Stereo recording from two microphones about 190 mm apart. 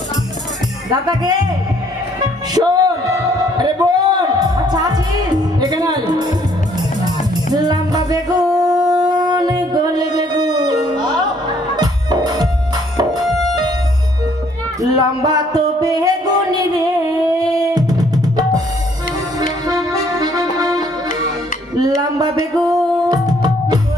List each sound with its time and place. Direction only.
0.8 s speech: 20° right (ahead or behind)
2.5 s a sound: 20° right (ahead or behind)
7.1 s music: 20° right (ahead or behind)
8.8 s a sound: 20° right (ahead or behind)
11.7 s music: 20° right (ahead or behind)
13.2 s music: centre (ahead or behind)
14.8 s music: 20° right (ahead or behind)
19.6 s music: 20° right (ahead or behind)